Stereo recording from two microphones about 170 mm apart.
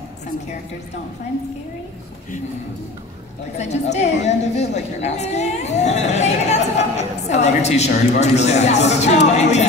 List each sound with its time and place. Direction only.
3.5 s a woman's voice: 40° left (ahead or behind)